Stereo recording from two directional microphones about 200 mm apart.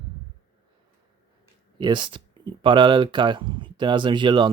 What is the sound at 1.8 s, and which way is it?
Speech, 25° right (ahead or behind).